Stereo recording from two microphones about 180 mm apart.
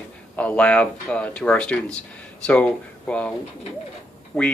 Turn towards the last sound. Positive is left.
turn(degrees=0)  # may be behind; listen again after turning